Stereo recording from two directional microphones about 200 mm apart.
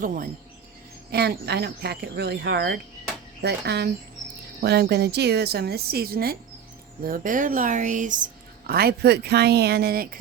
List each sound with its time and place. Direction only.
0.0 s a woman's voice: 45° right (ahead or behind)
8.6 s speech: 50° right (ahead or behind)